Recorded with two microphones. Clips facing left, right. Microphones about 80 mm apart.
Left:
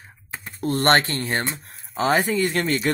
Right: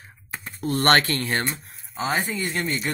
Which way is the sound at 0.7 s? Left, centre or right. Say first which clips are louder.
Left 1 dB; left.